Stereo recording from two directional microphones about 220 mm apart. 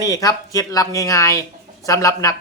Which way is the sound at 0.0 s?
15° left (ahead or behind).